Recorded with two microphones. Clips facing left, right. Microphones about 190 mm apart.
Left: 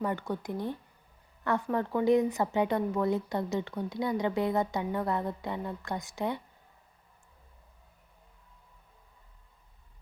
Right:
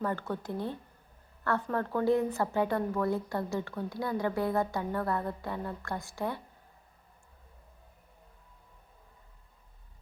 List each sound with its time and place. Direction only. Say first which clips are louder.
0.0 s speech: left 1 dB; 15° left (ahead or behind)